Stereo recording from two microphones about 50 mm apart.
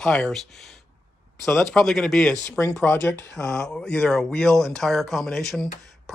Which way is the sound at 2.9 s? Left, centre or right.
Left.